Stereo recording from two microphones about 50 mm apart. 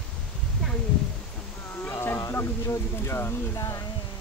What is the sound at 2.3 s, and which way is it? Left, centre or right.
Speech, left.